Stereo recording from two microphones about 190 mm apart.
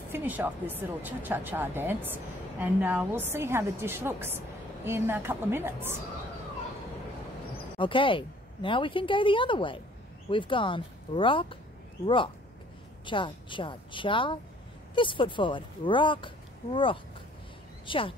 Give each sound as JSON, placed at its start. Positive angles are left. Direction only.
{"t": 0.1, "sound": "a woman's voice", "side_deg": -10}
{"t": 7.8, "sound": "a woman's voice", "side_deg": 25}
{"t": 13.0, "sound": "a woman's voice", "side_deg": 25}